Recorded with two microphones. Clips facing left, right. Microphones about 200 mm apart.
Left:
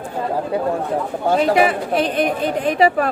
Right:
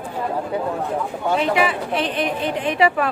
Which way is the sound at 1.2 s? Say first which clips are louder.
Left 4 dB; 40° left (ahead or behind).